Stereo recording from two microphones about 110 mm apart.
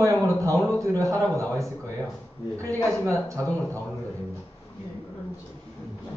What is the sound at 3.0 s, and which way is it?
Speech, 30° right (ahead or behind).